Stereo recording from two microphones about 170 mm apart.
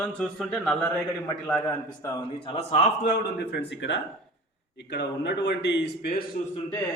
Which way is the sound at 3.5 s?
90° left.